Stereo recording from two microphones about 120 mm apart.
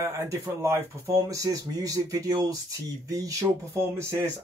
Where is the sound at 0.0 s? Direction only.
25° right (ahead or behind).